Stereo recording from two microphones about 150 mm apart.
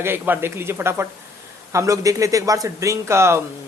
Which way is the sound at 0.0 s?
15° right (ahead or behind).